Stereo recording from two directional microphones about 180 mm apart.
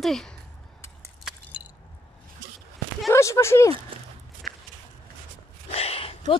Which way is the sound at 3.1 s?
15° left (ahead or behind).